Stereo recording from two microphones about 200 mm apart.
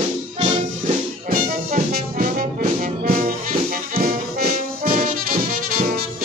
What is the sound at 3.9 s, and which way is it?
Brass instrument, 45° right (ahead or behind).